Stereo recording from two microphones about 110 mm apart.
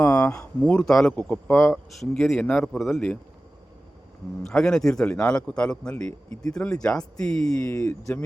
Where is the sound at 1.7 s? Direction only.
Centre (ahead or behind).